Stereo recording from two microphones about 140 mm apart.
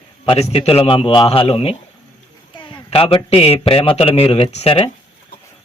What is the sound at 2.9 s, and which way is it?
A man's voice, 45° left (ahead or behind).